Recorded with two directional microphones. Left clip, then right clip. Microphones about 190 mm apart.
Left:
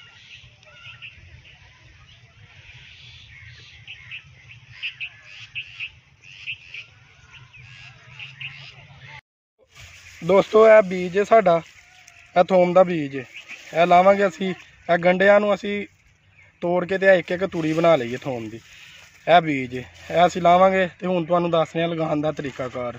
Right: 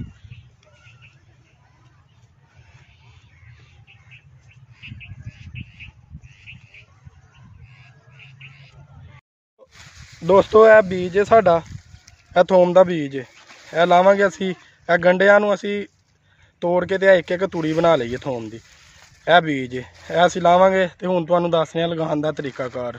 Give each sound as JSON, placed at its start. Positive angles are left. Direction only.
{"t": 4.7, "sound": "bird", "side_deg": -50}
{"t": 7.7, "sound": "a sound", "side_deg": -50}
{"t": 10.2, "sound": "a man's voice", "side_deg": -20}